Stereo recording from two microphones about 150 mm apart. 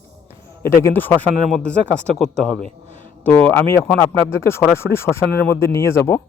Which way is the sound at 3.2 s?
10° left (ahead or behind).